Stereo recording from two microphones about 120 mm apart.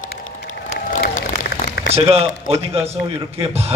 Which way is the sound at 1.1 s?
90° left.